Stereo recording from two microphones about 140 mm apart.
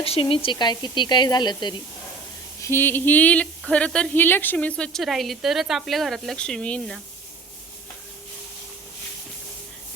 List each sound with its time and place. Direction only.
0.0 s speech: 40° left (ahead or behind)
2.6 s speech: 15° left (ahead or behind)